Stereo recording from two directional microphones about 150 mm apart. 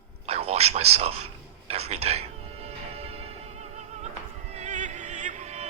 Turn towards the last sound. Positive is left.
turn(degrees=-50)  # may be behind; listen again after turning